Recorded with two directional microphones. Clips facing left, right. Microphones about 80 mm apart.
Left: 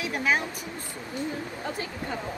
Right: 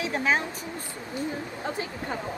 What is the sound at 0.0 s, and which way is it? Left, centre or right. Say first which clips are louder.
Speech: right 1 dB; right.